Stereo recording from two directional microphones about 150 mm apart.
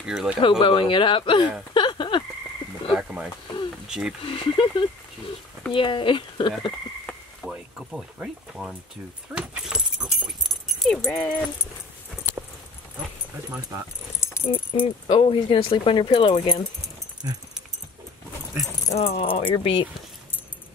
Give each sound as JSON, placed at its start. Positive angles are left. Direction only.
{"t": 0.0, "sound": "speech", "side_deg": -5}
{"t": 0.4, "sound": "speech", "side_deg": 35}
{"t": 1.7, "sound": "a sound", "side_deg": 30}
{"t": 2.9, "sound": "a sound", "side_deg": -5}
{"t": 4.2, "sound": "speech", "side_deg": 35}
{"t": 7.1, "sound": "a sound", "side_deg": -5}
{"t": 9.3, "sound": "dog", "side_deg": -10}
{"t": 11.1, "sound": "speech", "side_deg": 5}
{"t": 13.6, "sound": "speech", "side_deg": -25}
{"t": 14.2, "sound": "keys jangling", "side_deg": 20}
{"t": 14.7, "sound": "speech", "side_deg": 35}
{"t": 17.2, "sound": "speech", "side_deg": -20}
{"t": 18.9, "sound": "speech", "side_deg": 40}